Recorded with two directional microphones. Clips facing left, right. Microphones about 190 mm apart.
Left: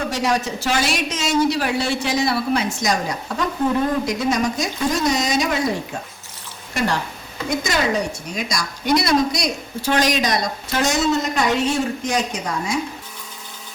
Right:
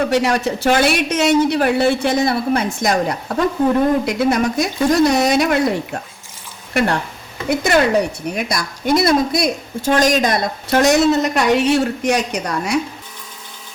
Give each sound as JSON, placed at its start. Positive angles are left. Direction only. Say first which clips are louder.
{"t": 0.1, "sound": "speech", "louder": "right 5 dB", "side_deg": -60}
{"t": 6.7, "sound": "a man's voice", "louder": "right 4 dB", "side_deg": -55}